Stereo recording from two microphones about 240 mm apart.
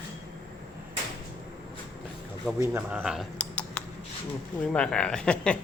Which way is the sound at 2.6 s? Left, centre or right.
Centre.